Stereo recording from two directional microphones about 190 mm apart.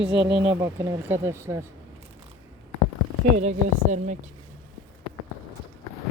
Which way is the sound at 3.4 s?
40° right (ahead or behind).